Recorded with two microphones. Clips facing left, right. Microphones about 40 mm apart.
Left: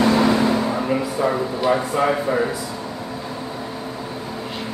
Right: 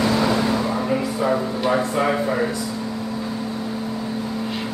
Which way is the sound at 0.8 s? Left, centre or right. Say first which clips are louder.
Even; centre.